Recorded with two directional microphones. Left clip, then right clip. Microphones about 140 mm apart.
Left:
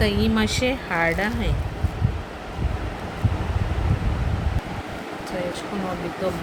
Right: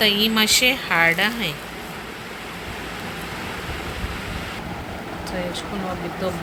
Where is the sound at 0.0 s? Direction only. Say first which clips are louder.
Right 5 dB; 15° left (ahead or behind).